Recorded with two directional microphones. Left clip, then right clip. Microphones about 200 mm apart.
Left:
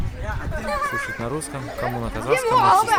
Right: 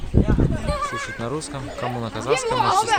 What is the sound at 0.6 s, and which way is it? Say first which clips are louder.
Speech: left 7 dB; 40° right (ahead or behind).